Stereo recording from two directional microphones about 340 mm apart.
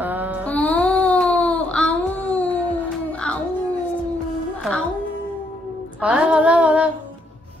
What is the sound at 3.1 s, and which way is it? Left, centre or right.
Music, centre.